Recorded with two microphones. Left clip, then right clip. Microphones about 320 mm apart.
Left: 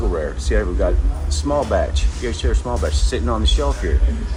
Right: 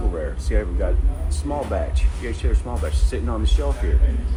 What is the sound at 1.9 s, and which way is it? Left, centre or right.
Speech, left.